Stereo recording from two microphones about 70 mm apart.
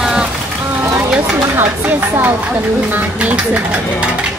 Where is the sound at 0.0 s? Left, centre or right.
Centre.